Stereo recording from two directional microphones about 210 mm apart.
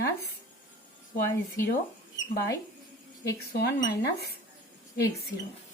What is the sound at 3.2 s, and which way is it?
A woman's voice, 50° left (ahead or behind).